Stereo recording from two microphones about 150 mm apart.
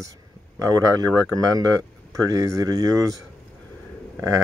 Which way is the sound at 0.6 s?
25° right (ahead or behind).